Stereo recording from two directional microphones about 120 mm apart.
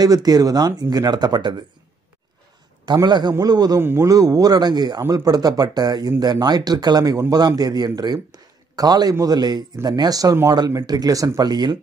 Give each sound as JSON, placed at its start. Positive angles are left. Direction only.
{"t": 0.0, "sound": "speech", "side_deg": -30}
{"t": 2.8, "sound": "speech", "side_deg": -35}